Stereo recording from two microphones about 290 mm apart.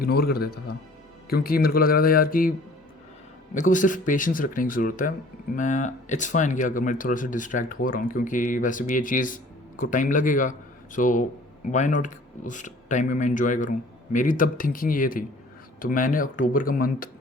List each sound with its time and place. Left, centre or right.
0.0 s speech: left
3.5 s speech: left